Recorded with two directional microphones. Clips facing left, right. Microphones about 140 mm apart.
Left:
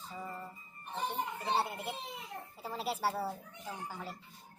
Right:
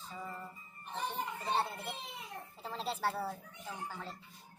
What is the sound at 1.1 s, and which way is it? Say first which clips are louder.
Speech: left 1 dB; 15° left (ahead or behind).